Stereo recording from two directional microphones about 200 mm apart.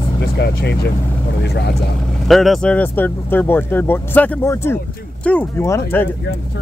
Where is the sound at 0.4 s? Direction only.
55° left (ahead or behind).